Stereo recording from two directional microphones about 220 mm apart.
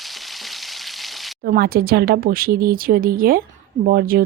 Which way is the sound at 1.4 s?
45° right (ahead or behind).